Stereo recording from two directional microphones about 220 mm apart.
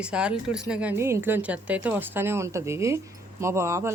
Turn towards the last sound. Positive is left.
turn(degrees=-10)  # may be behind; listen again after turning